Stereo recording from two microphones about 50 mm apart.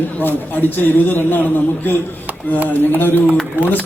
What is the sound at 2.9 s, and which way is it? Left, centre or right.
Speech, left.